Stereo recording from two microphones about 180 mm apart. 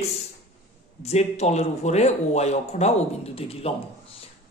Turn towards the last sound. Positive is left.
turn(degrees=35)  # may be behind; listen again after turning